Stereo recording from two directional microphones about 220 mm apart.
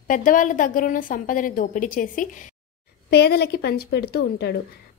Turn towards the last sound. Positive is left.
turn(degrees=50)  # may be behind; listen again after turning